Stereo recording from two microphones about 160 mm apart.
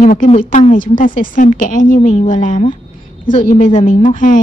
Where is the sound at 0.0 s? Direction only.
60° left (ahead or behind).